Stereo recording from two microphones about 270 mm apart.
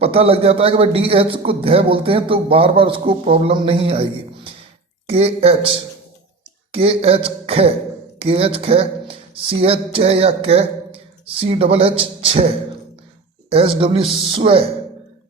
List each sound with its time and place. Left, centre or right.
0.0 s a man's voice: right